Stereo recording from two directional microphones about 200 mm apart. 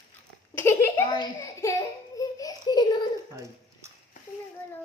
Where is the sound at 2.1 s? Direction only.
15° left (ahead or behind).